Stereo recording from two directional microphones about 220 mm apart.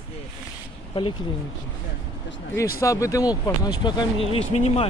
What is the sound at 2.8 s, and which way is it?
Speech, 15° left (ahead or behind).